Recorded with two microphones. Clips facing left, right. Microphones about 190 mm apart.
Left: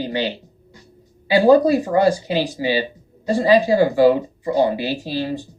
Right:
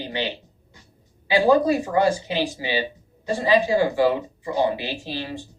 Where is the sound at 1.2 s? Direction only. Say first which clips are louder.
Left 5 dB; 35° left (ahead or behind).